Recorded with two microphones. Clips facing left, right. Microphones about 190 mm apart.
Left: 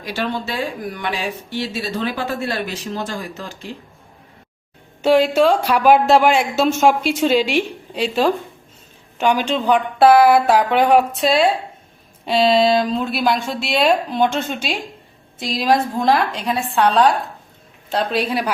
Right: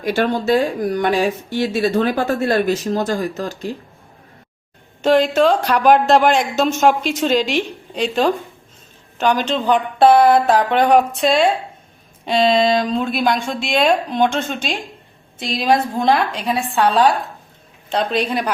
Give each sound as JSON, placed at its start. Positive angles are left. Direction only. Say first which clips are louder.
{"t": 0.0, "sound": "speech", "louder": "right 6 dB", "side_deg": -50}
{"t": 5.0, "sound": "a woman's voice", "louder": "even", "side_deg": 10}